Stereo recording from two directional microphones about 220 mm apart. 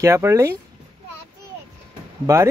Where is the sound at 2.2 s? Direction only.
10° right (ahead or behind).